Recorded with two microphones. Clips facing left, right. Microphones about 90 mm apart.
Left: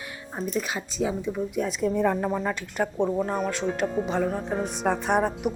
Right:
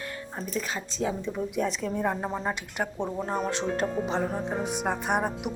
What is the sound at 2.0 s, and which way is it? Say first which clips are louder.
Speech: left 4 dB; 15° right (ahead or behind).